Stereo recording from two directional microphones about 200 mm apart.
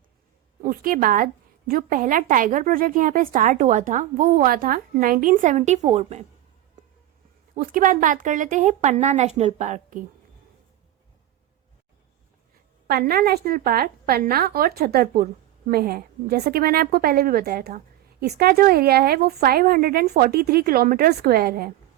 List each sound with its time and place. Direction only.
0.6 s a woman's voice: 45° right (ahead or behind)
7.5 s speech: 45° right (ahead or behind)
12.9 s a woman's voice: 50° right (ahead or behind)